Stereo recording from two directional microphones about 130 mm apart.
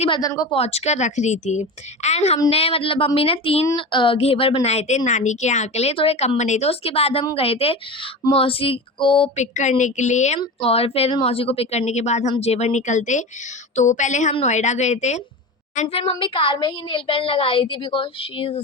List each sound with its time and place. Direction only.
0.1 s speech: 30° left (ahead or behind)
0.5 s a woman's voice: 50° left (ahead or behind)
9.3 s a woman's voice: 65° left (ahead or behind)
10.6 s a woman's voice: 50° left (ahead or behind)